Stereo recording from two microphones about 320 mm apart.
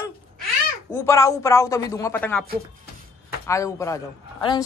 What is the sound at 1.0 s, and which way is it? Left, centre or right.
Speech, centre.